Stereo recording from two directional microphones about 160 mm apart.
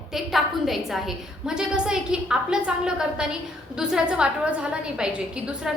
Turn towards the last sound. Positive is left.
turn(degrees=-5)  # may be behind; listen again after turning